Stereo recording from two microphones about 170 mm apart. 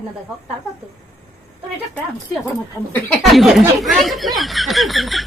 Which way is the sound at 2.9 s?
Centre (ahead or behind).